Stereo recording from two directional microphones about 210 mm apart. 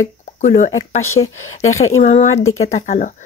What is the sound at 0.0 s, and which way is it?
Speech, 40° left (ahead or behind).